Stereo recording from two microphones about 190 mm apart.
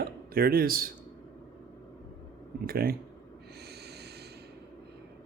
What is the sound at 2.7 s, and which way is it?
Speech, 50° right (ahead or behind).